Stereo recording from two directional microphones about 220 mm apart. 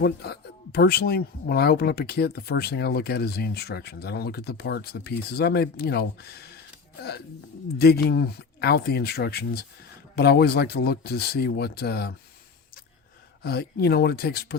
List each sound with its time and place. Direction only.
0.0 s speech: 45° left (ahead or behind)
7.8 s speech: 45° left (ahead or behind)
13.4 s speech: 45° left (ahead or behind)